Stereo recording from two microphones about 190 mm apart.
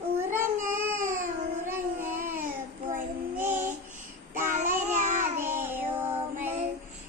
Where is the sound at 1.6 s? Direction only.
10° right (ahead or behind).